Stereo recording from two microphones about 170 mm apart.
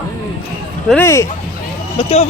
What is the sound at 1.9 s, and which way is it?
Speech, 40° left (ahead or behind).